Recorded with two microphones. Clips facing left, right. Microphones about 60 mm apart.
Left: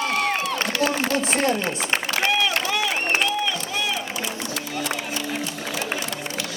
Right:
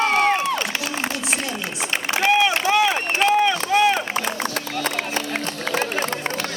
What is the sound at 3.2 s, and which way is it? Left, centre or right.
Run, right.